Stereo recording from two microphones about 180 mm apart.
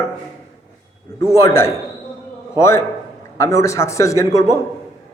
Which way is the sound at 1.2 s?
15° left (ahead or behind).